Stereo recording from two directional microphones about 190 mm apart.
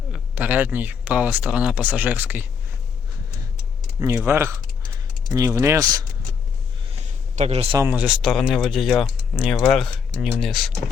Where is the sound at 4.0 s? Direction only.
10° right (ahead or behind).